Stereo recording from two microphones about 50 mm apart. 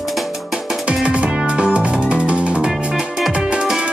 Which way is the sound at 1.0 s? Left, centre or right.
Right.